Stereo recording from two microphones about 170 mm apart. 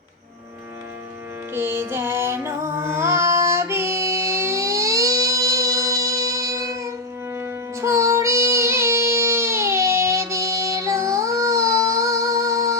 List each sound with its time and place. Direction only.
1.5 s music: 15° right (ahead or behind)